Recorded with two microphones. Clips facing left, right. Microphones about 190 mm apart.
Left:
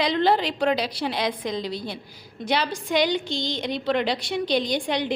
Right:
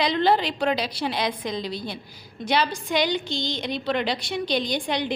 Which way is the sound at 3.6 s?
70° left (ahead or behind).